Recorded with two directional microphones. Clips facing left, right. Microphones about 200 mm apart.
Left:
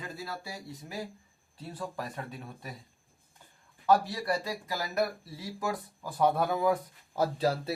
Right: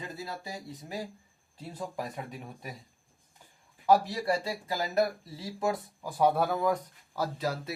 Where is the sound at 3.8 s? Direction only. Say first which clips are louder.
Right 1 dB; 15° right (ahead or behind).